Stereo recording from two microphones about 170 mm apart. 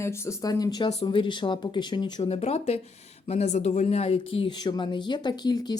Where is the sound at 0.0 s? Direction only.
15° left (ahead or behind).